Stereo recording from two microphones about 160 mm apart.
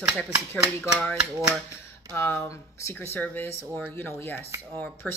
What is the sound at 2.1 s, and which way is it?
Speech, 15° left (ahead or behind).